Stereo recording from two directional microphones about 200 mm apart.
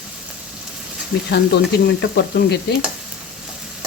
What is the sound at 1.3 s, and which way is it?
Sizzle, 55° left (ahead or behind).